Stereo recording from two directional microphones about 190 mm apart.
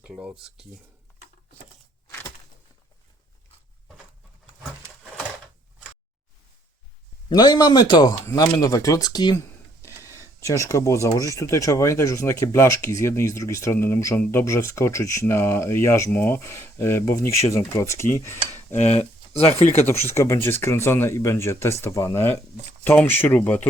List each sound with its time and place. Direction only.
0.0 s speech: 5° right (ahead or behind)
2.0 s a sound: 10° left (ahead or behind)
7.3 s speech: 20° left (ahead or behind)
18.9 s speech: 35° left (ahead or behind)
20.1 s speech: 15° left (ahead or behind)